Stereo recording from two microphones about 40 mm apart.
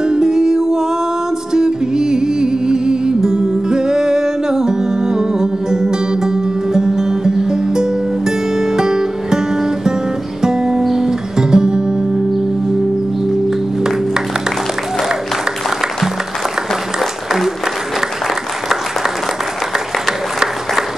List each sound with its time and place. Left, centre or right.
0.0 s music: centre
13.3 s music: centre
20.1 s applause: centre